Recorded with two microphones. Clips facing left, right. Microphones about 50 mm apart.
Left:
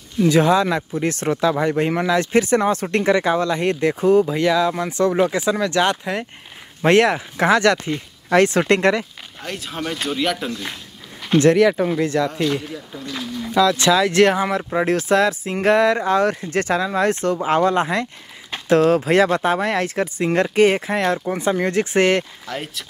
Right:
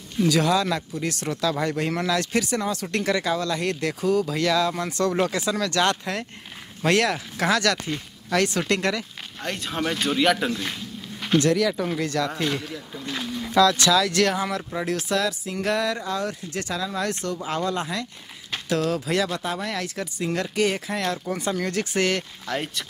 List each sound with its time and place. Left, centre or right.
0.2 s speech: left
9.4 s speech: centre
11.3 s speech: left
12.0 s speech: left
12.3 s speech: centre
13.6 s speech: centre
22.5 s speech: centre